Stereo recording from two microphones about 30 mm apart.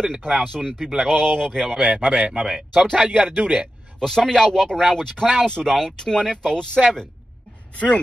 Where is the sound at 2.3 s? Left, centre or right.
Right.